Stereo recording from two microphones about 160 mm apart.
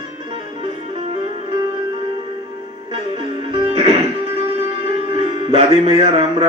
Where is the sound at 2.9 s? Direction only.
35° right (ahead or behind).